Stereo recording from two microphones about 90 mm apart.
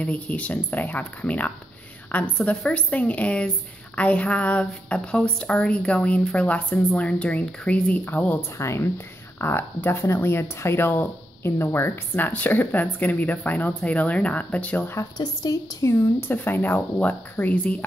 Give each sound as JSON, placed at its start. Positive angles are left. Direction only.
{"t": 0.0, "sound": "a woman's voice", "side_deg": 15}
{"t": 8.5, "sound": "speech", "side_deg": 30}
{"t": 15.1, "sound": "a woman's voice", "side_deg": 40}
{"t": 15.9, "sound": "speech", "side_deg": 25}